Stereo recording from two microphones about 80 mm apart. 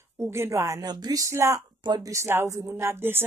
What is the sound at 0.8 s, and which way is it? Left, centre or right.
Speech, right.